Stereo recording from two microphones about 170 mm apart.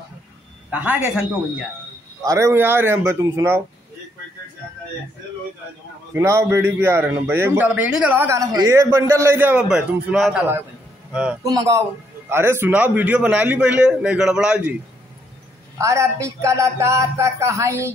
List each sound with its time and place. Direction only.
0.7 s a man's voice: 10° right (ahead or behind)
2.2 s a man's voice: 15° right (ahead or behind)
6.1 s a man's voice: 15° right (ahead or behind)
11.4 s a man's voice: 20° right (ahead or behind)
15.8 s a man's voice: 15° right (ahead or behind)